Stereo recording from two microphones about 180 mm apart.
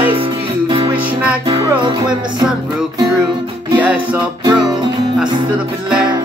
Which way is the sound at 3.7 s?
10° right (ahead or behind).